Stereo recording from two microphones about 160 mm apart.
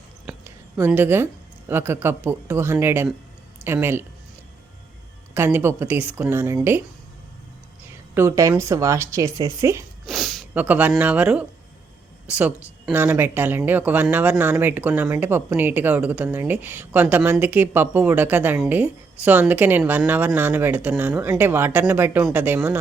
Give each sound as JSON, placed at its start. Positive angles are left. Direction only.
{"t": 0.4, "sound": "speech", "side_deg": -15}
{"t": 5.3, "sound": "speech", "side_deg": -15}
{"t": 8.1, "sound": "speech", "side_deg": -15}
{"t": 10.1, "sound": "a sound", "side_deg": 0}
{"t": 10.5, "sound": "speech", "side_deg": -10}